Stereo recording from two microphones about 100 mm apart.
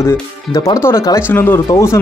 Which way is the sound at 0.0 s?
30° left (ahead or behind).